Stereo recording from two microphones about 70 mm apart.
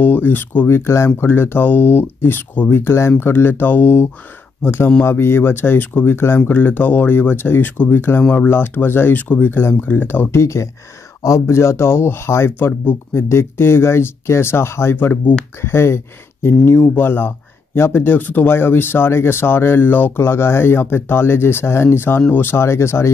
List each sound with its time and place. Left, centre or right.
0.0 s speech: left
8.5 s speech: left
10.4 s speech: left